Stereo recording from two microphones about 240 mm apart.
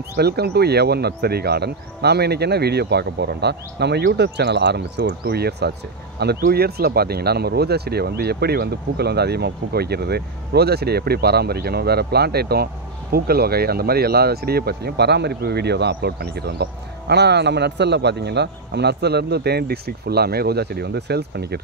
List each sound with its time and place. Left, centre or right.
0.1 s speech: right